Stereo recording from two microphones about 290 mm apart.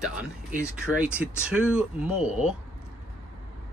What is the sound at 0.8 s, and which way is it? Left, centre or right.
Speech, centre.